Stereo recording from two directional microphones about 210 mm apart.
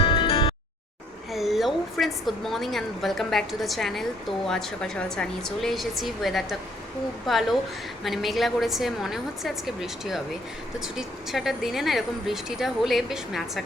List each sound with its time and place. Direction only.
0.0 s music: 25° left (ahead or behind)
1.3 s a woman's voice: centre (ahead or behind)